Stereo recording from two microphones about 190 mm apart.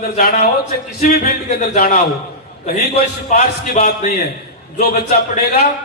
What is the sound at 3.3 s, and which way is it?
Speech, 40° left (ahead or behind).